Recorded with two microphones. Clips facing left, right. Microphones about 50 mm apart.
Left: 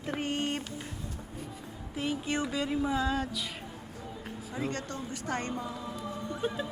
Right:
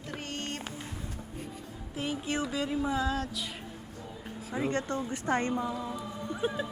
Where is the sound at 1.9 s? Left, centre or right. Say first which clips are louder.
Left 1 dB; centre.